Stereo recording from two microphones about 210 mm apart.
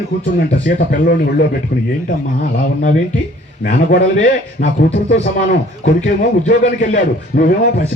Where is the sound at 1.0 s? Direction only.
50° left (ahead or behind).